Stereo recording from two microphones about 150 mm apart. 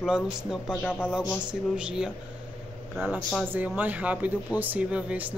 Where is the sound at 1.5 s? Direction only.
5° right (ahead or behind).